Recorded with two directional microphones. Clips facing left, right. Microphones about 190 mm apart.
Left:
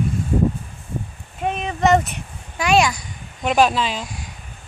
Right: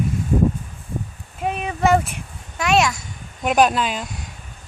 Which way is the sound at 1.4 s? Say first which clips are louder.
Left 1 dB; 5° right (ahead or behind).